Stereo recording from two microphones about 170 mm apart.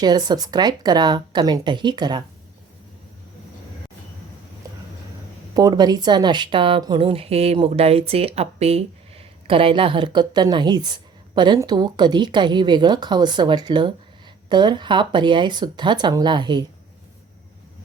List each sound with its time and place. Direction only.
0.0 s a woman's voice: 25° right (ahead or behind)
5.5 s a woman's voice: 25° right (ahead or behind)